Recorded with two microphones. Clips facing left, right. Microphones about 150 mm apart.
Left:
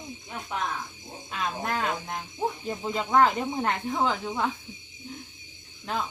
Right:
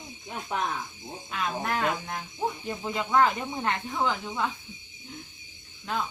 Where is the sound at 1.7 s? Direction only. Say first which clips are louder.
Right 1 dB; 25° left (ahead or behind).